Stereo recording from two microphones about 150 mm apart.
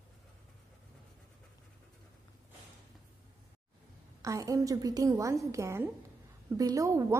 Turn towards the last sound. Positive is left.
turn(degrees=-20)  # may be behind; listen again after turning